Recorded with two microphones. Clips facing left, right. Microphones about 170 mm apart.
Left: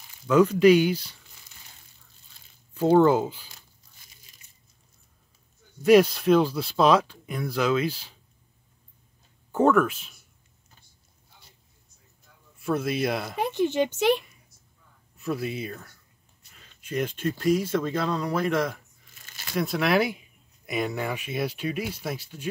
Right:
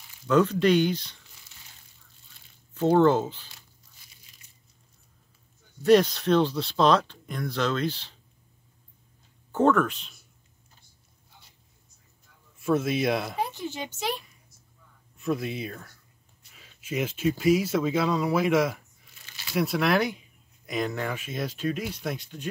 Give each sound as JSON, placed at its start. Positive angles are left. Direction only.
{"t": 0.3, "sound": "speech", "side_deg": 10}
{"t": 2.7, "sound": "speech", "side_deg": 5}
{"t": 5.9, "sound": "speech", "side_deg": 10}
{"t": 9.5, "sound": "speech", "side_deg": 10}
{"t": 12.5, "sound": "speech", "side_deg": 0}
{"t": 13.4, "sound": "speech", "side_deg": 65}
{"t": 15.1, "sound": "speech", "side_deg": 0}